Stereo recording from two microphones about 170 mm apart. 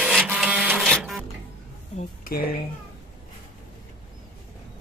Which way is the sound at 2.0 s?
55° left (ahead or behind).